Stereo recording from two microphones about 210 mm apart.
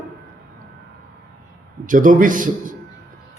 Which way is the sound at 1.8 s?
40° right (ahead or behind).